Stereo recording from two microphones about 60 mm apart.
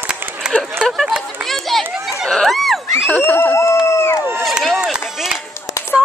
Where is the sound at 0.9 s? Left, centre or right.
Centre.